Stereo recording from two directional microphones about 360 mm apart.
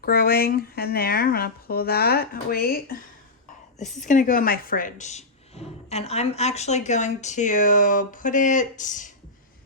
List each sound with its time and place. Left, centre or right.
0.0 s speech: left
4.0 s speech: left